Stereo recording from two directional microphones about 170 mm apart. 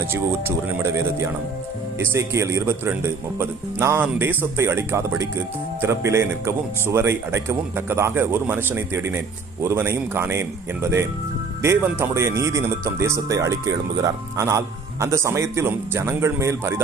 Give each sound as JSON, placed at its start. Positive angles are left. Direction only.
{"t": 0.1, "sound": "speech", "side_deg": -15}
{"t": 11.6, "sound": "speech", "side_deg": -15}